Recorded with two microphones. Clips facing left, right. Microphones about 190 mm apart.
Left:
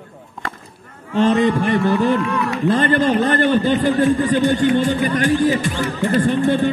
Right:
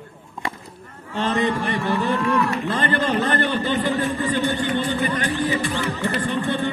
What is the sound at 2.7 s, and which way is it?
Speech, 45° left (ahead or behind).